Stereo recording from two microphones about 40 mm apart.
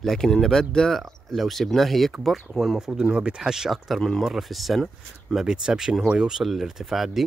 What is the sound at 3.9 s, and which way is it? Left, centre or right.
Speech, centre.